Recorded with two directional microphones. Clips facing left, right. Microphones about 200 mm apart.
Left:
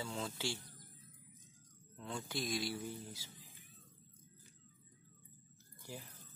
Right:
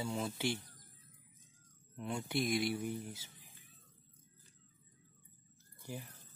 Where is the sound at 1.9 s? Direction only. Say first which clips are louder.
Right 6 dB; 20° right (ahead or behind).